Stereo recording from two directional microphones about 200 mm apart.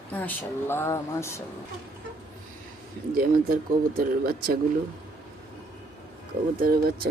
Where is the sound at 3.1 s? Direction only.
45° right (ahead or behind).